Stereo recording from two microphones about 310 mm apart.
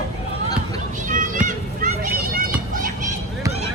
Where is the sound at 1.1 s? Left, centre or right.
Right.